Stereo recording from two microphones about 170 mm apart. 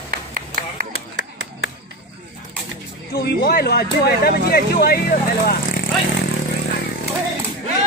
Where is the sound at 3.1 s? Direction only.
70° left (ahead or behind).